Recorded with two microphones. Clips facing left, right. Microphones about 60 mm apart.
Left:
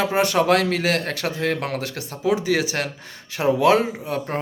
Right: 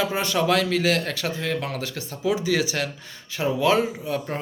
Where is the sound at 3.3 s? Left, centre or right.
Left.